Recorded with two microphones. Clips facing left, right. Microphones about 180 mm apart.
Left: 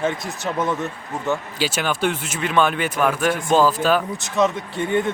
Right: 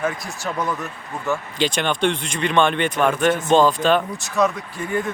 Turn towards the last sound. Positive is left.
turn(degrees=25)  # may be behind; listen again after turning